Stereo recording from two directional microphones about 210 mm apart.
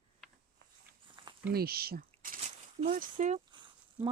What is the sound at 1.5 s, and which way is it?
Speech, 45° right (ahead or behind).